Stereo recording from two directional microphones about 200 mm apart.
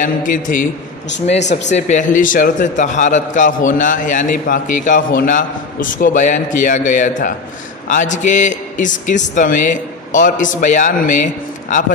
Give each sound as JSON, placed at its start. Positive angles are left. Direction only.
{"t": 0.0, "sound": "a man's voice", "side_deg": 40}